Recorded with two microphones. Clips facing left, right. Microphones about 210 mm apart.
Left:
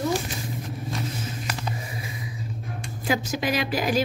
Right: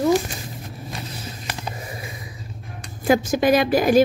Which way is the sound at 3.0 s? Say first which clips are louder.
Right 8 dB; 50° right (ahead or behind).